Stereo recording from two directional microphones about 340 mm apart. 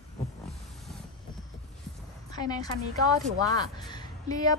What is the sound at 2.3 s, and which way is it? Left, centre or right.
Speech, centre.